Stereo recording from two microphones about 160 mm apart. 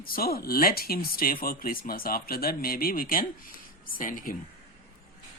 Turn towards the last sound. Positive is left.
turn(degrees=60)  # may be behind; listen again after turning